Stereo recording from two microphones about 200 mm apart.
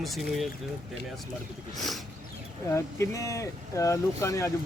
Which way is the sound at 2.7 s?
15° left (ahead or behind).